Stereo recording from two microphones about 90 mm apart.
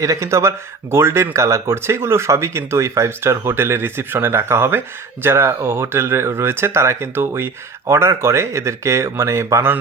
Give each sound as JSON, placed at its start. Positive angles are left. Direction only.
{"t": 0.0, "sound": "speech", "side_deg": -35}